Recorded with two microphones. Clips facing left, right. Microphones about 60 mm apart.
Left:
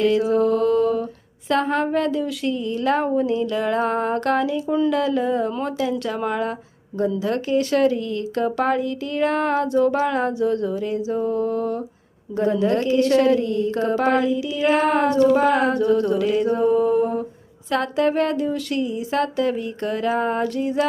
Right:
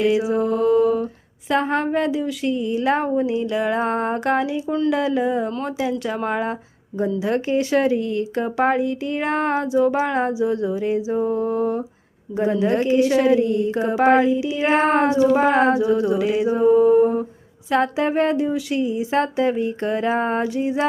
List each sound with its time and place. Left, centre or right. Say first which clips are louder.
0.0 s mantra: left 1 dB; centre
1.5 s speech: even; centre
2.6 s speech: even; centre
6.2 s speech: right 1 dB; right
13.0 s speech: even; centre; by 15.1 s right
15.1 s speech: even; centre
15.7 s speech: even; centre